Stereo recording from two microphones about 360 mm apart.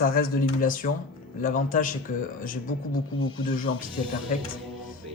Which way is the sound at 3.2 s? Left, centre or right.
Left.